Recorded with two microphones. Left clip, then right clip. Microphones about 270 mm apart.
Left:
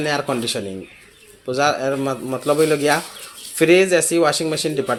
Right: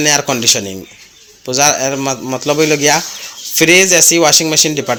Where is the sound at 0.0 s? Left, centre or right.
Right.